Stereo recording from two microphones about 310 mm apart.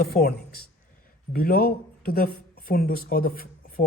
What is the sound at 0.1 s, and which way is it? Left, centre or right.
Speech, left.